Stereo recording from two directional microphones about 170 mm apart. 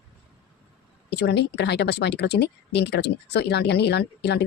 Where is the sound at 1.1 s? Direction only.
75° left (ahead or behind).